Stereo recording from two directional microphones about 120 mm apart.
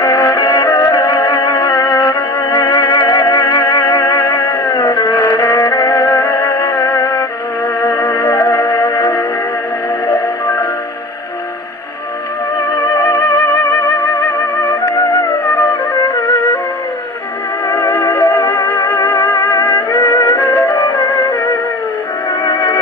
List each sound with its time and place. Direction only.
0.0 s music: 30° left (ahead or behind)
12.5 s music: 25° left (ahead or behind)
17.6 s music: 25° left (ahead or behind)
22.4 s music: 25° left (ahead or behind)